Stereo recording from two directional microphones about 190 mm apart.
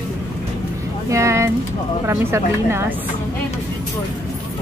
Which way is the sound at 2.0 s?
15° right (ahead or behind).